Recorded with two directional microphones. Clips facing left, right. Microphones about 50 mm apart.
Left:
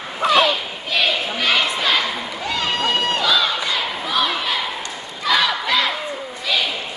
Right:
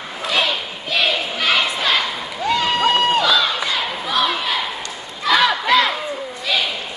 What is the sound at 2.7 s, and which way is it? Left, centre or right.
Crowd, right.